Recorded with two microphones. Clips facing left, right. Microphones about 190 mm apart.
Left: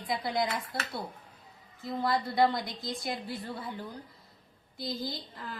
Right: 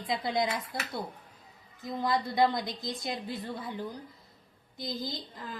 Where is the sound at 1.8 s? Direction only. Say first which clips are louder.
Even; 15° right (ahead or behind).